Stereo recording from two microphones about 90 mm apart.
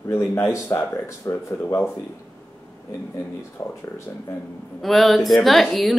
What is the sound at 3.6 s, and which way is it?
Speech, 40° left (ahead or behind).